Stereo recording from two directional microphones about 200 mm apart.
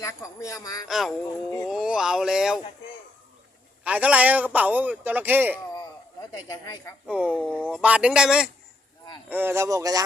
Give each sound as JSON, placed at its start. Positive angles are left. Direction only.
{"t": 0.0, "sound": "speech", "side_deg": 15}
{"t": 0.9, "sound": "speech", "side_deg": 0}
{"t": 3.8, "sound": "a man's voice", "side_deg": -5}
{"t": 6.3, "sound": "speech", "side_deg": 15}
{"t": 7.1, "sound": "a man's voice", "side_deg": -5}